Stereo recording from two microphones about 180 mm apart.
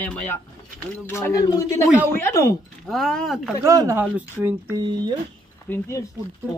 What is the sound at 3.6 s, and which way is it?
Speech, 20° right (ahead or behind).